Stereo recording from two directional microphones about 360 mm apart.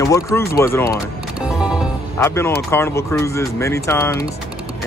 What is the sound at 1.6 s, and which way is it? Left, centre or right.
Music, centre.